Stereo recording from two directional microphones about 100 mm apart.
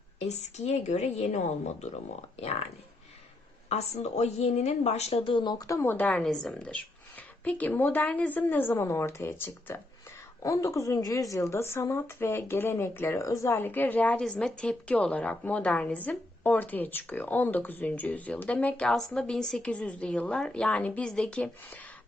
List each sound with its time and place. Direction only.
0.2 s a woman's voice: 90° left
2.3 s a woman's voice: 90° left
3.7 s a woman's voice: 90° left; by 5.6 s 50° left (ahead or behind)
5.6 s speech: 30° left (ahead or behind)
5.9 s a woman's voice: 15° left (ahead or behind)
6.2 s a woman's voice: 5° left (ahead or behind)